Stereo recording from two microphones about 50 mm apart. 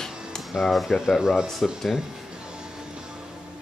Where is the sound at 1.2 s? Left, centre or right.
Centre.